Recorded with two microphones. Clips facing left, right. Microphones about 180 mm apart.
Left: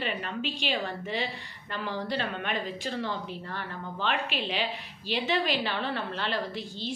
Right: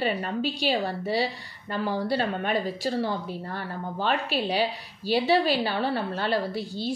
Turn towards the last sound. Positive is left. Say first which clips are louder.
# right 5 dB
turn(degrees=-40)  # may be behind; listen again after turning